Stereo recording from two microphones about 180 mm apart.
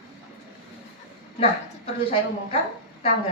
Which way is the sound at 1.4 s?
35° left (ahead or behind).